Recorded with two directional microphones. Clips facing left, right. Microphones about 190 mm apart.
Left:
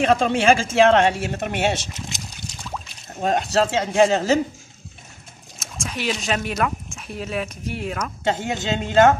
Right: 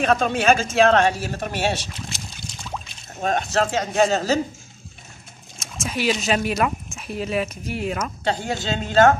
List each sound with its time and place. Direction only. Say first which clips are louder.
0.0 s speech: left 2 dB; 25° left (ahead or behind)
3.2 s speech: left 2 dB; 30° left (ahead or behind)
5.6 s speech: right 3 dB; 5° right (ahead or behind)
8.3 s speech: left 2 dB; 20° left (ahead or behind)